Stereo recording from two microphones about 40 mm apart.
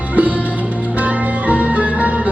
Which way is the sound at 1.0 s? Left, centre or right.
Right.